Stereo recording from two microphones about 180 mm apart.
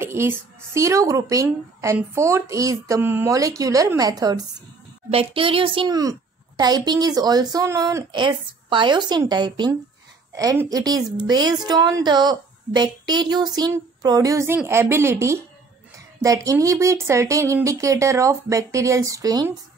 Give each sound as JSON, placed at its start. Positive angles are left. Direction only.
{"t": 0.0, "sound": "speech", "side_deg": -15}
{"t": 5.1, "sound": "a woman's voice", "side_deg": -30}
{"t": 16.4, "sound": "speech", "side_deg": -15}